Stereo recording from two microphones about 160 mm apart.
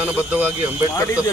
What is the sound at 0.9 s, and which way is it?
Speech, 20° left (ahead or behind).